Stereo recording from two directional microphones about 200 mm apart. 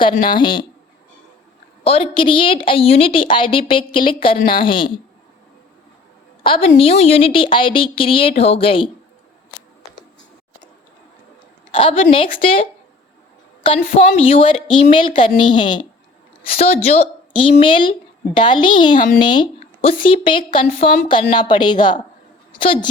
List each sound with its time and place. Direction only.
0.3 s a woman's voice: 25° left (ahead or behind)
1.8 s a woman's voice: 30° left (ahead or behind)
4.4 s a woman's voice: 45° left (ahead or behind)
4.6 s a woman's voice: 25° left (ahead or behind)
6.4 s a woman's voice: 25° left (ahead or behind)
11.7 s a woman's voice: 25° left (ahead or behind)
13.6 s a woman's voice: 25° left (ahead or behind)